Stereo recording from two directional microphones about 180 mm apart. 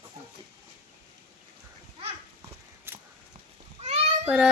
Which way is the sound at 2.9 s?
10° right (ahead or behind).